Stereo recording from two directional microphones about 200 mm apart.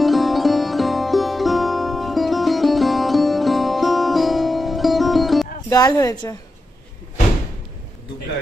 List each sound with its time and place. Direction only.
0.0 s music: centre (ahead or behind)
5.7 s speech: 20° left (ahead or behind)